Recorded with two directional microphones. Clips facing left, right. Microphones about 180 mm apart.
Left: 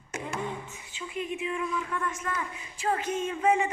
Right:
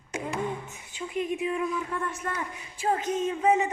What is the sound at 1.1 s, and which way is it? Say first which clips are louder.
A woman's voice: right 4 dB; 45° right (ahead or behind).